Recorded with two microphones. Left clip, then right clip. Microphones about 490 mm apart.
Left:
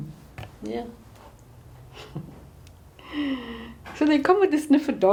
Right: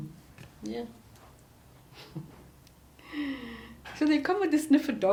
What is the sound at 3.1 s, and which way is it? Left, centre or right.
Speech, left.